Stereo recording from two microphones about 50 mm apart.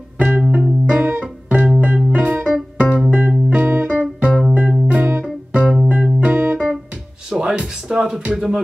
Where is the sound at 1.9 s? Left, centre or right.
Centre.